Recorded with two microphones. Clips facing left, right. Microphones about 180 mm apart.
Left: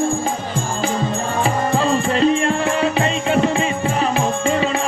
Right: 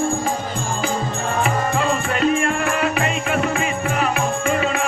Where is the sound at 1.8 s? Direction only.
30° left (ahead or behind).